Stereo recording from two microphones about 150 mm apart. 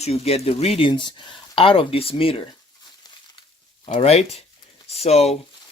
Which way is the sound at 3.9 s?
45° left (ahead or behind).